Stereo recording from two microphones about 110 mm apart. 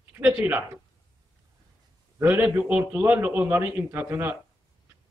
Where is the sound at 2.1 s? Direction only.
20° right (ahead or behind).